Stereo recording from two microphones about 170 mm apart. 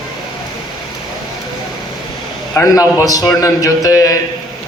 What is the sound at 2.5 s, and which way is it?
A man's voice, 20° left (ahead or behind).